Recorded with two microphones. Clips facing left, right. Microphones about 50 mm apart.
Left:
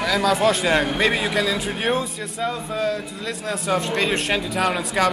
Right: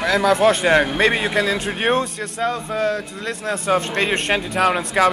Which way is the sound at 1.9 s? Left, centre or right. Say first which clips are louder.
Right 4 dB; right.